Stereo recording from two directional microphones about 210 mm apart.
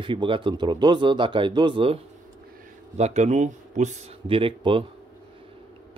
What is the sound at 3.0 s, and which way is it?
Speech, 30° right (ahead or behind).